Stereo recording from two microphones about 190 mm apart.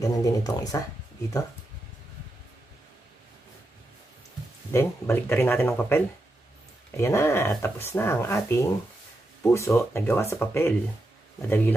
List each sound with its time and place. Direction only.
0.0 s speech: 20° left (ahead or behind)
4.7 s speech: 10° left (ahead or behind)